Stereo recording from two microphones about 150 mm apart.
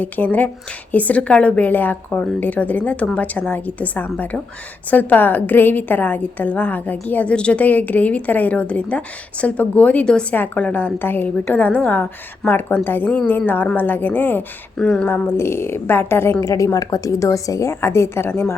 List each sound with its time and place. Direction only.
0.0 s a woman's voice: 10° left (ahead or behind)